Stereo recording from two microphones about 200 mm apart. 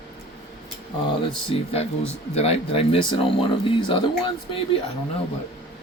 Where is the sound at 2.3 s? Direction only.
30° left (ahead or behind).